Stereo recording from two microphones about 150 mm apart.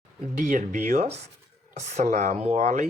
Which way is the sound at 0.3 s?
65° right (ahead or behind).